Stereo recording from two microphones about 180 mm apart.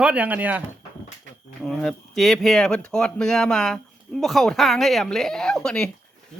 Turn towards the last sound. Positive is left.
turn(degrees=5)  # may be behind; listen again after turning